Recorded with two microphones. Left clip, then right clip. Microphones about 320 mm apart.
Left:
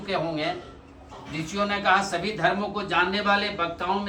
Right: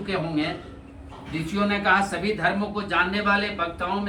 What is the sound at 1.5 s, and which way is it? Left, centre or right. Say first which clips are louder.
A man's voice: right 1 dB; left.